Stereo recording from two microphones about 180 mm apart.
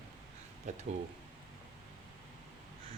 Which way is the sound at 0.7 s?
40° right (ahead or behind).